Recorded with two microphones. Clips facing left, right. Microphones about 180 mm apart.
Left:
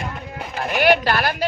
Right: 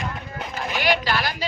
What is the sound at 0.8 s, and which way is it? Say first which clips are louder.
Speech: left 6 dB; 55° left (ahead or behind).